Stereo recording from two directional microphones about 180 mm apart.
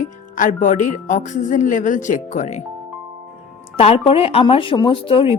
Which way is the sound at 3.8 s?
35° left (ahead or behind).